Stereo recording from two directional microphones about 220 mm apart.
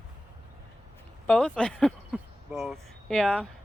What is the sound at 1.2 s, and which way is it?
Speech, 5° left (ahead or behind).